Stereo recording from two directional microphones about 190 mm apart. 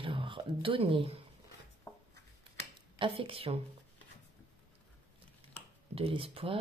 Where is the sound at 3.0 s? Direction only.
30° right (ahead or behind).